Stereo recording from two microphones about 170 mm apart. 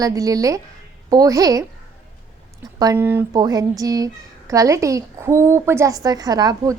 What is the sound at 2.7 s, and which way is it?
A woman's voice, 20° right (ahead or behind).